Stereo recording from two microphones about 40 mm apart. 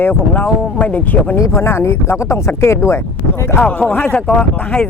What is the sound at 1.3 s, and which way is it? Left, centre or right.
Speech, left.